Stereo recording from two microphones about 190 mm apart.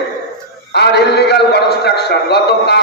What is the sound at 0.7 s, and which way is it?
A man's voice, 60° left (ahead or behind).